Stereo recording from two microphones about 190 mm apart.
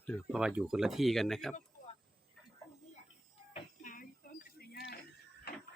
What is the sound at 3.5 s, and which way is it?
Music, 45° left (ahead or behind).